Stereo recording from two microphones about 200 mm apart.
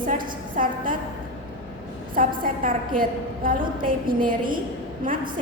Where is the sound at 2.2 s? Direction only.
45° right (ahead or behind).